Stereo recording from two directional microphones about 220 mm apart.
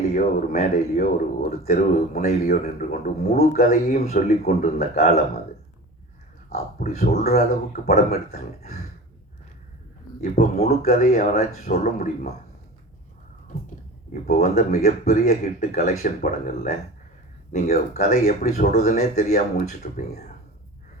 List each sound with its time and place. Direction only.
0.0 s a man's voice: 40° left (ahead or behind)
6.5 s a man's voice: 40° left (ahead or behind)
10.2 s a man's voice: 30° left (ahead or behind)
14.1 s a man's voice: 40° left (ahead or behind)